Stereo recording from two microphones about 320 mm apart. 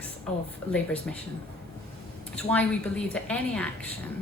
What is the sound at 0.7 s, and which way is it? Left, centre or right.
Speech, centre.